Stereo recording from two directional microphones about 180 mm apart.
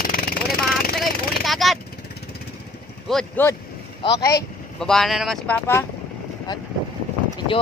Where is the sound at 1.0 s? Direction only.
Centre (ahead or behind).